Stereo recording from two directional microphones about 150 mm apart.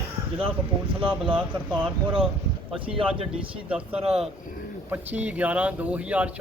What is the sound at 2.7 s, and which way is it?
Speech, 35° right (ahead or behind).